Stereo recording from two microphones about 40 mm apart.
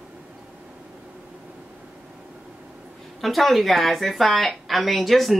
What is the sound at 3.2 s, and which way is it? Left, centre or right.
A woman's voice, centre.